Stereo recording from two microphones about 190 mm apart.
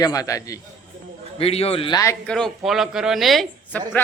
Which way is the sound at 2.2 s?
5° left (ahead or behind).